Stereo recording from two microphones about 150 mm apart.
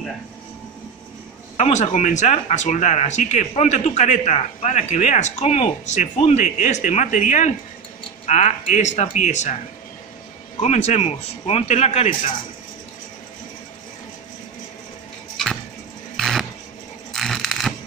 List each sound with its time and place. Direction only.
1.6 s speech: 50° left (ahead or behind)
10.6 s speech: 50° left (ahead or behind)
16.2 s a sound: centre (ahead or behind)